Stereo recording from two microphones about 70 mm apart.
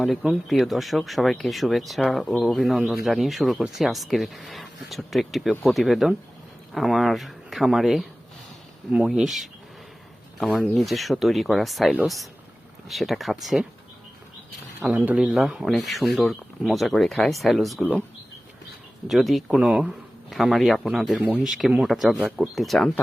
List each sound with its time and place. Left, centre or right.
0.0 s speech: centre
14.9 s speech: centre
15.2 s speech: centre
19.0 s speech: centre
19.5 s speech: centre